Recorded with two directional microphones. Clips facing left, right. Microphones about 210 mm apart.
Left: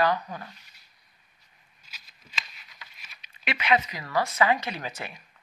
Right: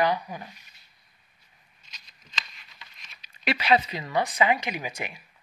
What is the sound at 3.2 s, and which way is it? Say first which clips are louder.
Speech: right 4 dB; 35° right (ahead or behind).